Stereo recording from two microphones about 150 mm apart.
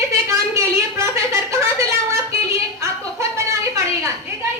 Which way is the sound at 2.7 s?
20° right (ahead or behind).